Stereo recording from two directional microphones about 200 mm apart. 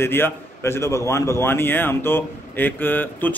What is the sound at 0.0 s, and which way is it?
A man's voice, 10° left (ahead or behind).